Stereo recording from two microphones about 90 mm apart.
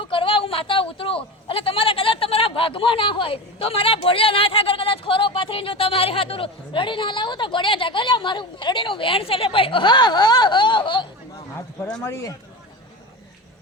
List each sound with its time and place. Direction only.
0.0 s speech: 75° left (ahead or behind)
12.0 s speech: 35° left (ahead or behind)